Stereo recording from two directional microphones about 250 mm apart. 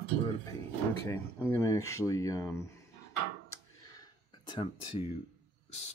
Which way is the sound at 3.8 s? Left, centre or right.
Centre.